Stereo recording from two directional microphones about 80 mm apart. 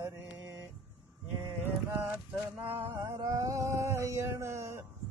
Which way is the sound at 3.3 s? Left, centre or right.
Right.